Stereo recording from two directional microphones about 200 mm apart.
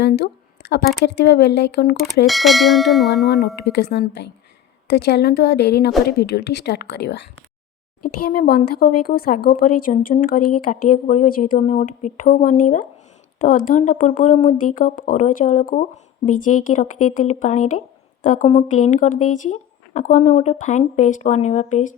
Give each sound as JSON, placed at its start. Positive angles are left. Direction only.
{"t": 0.0, "sound": "a sound", "side_deg": 55}
{"t": 1.0, "sound": "a woman's voice", "side_deg": 55}
{"t": 2.2, "sound": "bell", "side_deg": 0}
{"t": 3.6, "sound": "a woman's voice", "side_deg": 55}